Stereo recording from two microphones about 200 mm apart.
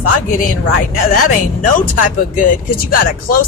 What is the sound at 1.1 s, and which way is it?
Speech, 45° left (ahead or behind).